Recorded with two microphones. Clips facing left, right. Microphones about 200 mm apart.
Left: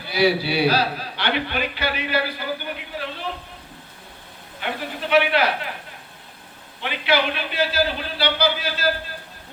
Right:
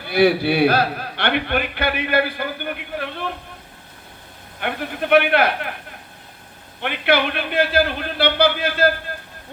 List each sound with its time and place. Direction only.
0.0 s a man's voice: 55° right (ahead or behind)
4.6 s a man's voice: 55° right (ahead or behind)
6.8 s a man's voice: 55° right (ahead or behind)